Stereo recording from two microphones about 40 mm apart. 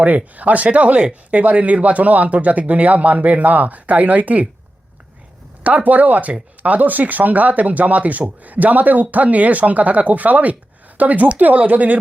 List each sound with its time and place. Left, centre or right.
0.3 s speech: right
5.6 s speech: right